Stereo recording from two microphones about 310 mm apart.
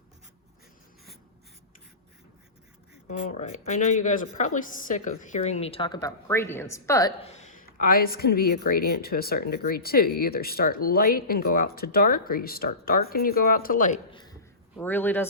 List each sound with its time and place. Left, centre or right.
3.1 s a woman's voice: left
14.8 s speech: centre